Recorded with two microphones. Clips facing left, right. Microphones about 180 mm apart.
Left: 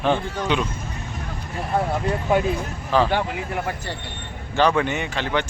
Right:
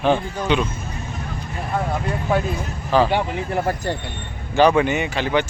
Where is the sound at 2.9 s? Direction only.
Centre (ahead or behind).